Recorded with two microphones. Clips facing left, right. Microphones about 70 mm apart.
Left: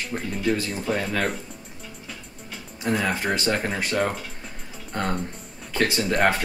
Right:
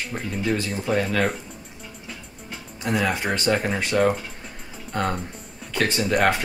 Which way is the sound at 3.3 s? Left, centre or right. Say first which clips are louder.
Right 2 dB; centre.